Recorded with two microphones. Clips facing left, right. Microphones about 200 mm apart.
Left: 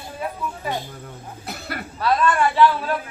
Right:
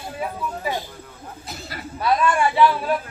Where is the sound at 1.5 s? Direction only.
60° left (ahead or behind).